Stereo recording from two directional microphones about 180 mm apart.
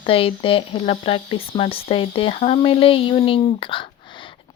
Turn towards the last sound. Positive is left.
turn(degrees=30)  # may be behind; listen again after turning